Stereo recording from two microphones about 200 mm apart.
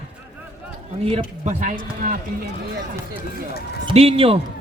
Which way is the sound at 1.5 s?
40° right (ahead or behind).